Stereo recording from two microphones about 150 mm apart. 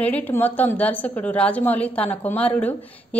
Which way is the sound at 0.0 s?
10° left (ahead or behind).